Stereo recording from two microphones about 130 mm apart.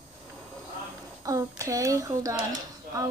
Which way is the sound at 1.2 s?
25° right (ahead or behind).